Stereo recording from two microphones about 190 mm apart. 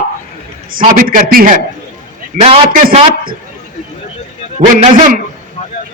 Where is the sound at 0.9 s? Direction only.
50° right (ahead or behind).